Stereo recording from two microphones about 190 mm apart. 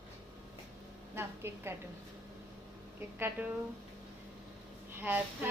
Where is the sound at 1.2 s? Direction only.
10° right (ahead or behind).